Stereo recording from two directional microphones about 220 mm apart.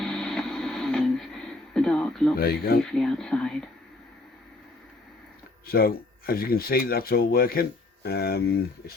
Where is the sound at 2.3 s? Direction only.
45° left (ahead or behind).